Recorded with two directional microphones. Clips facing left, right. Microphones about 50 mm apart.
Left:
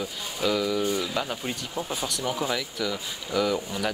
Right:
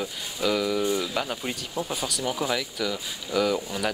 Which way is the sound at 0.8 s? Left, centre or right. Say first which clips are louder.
Right 1 dB; right.